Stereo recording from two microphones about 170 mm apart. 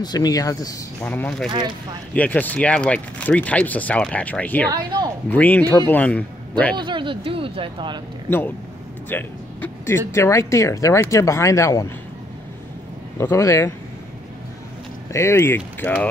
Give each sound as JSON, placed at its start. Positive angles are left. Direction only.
{"t": 0.0, "sound": "speech", "side_deg": 25}
{"t": 1.0, "sound": "speech", "side_deg": 10}
{"t": 4.6, "sound": "a woman's voice", "side_deg": -20}
{"t": 5.3, "sound": "speech", "side_deg": 10}
{"t": 6.8, "sound": "speech", "side_deg": -30}
{"t": 8.3, "sound": "speech", "side_deg": 15}
{"t": 13.2, "sound": "speech", "side_deg": 15}
{"t": 15.1, "sound": "speech", "side_deg": 15}